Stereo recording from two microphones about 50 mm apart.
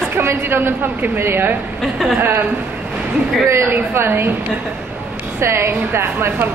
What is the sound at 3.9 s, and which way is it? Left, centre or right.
Speech, right.